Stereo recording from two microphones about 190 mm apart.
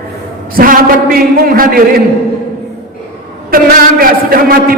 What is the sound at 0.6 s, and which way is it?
A man's voice, 50° right (ahead or behind).